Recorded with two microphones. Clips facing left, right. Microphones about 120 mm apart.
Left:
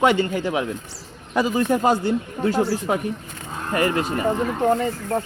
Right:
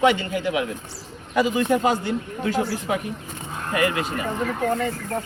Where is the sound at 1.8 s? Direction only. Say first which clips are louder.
Left 3 dB; 40° left (ahead or behind).